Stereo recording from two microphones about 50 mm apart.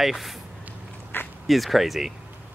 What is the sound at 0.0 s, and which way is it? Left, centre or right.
Speech, centre.